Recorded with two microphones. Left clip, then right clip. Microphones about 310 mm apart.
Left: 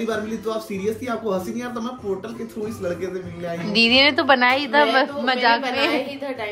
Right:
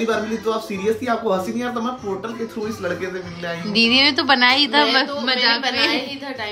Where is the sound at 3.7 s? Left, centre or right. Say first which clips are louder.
Even; centre.